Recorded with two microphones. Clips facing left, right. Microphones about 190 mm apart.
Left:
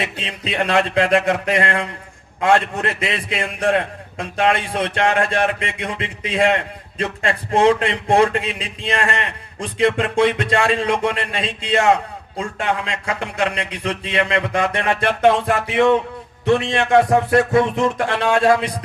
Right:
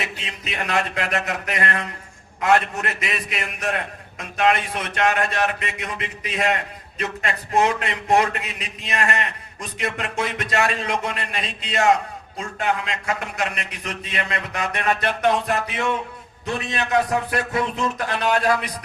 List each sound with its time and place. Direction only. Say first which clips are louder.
0.0 s a man's voice: left 5 dB; 30° left (ahead or behind)